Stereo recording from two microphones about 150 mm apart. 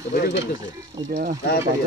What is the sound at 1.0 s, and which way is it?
Speech, 30° right (ahead or behind).